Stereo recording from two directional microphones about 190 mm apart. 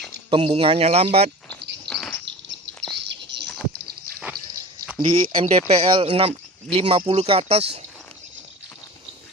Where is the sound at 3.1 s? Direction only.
65° right (ahead or behind).